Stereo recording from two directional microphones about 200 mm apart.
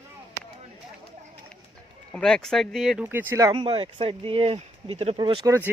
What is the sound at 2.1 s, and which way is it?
Speech, 5° left (ahead or behind).